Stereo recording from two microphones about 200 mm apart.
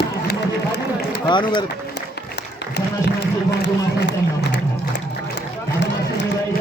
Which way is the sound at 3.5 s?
60° left (ahead or behind).